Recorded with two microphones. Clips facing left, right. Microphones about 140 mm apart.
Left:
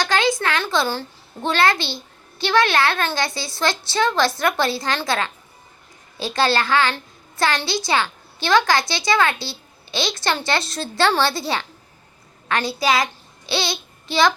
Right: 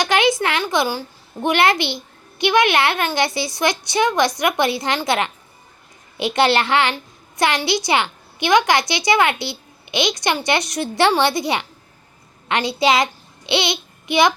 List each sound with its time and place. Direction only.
0.0 s a woman's voice: 20° right (ahead or behind)